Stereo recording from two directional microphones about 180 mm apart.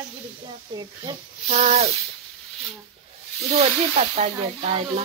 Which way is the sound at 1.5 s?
35° right (ahead or behind).